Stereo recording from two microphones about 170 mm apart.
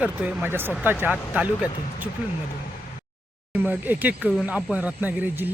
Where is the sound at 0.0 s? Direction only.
5° right (ahead or behind).